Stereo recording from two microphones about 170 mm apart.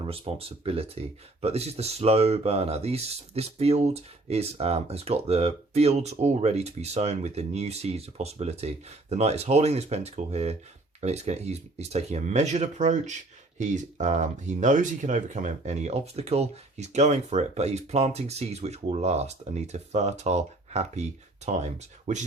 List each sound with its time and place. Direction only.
0.0 s speech: 35° right (ahead or behind)